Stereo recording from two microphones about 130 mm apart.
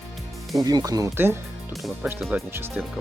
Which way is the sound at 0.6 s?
30° right (ahead or behind).